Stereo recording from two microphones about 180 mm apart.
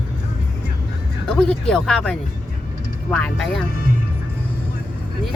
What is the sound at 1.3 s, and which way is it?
Speech, 5° left (ahead or behind).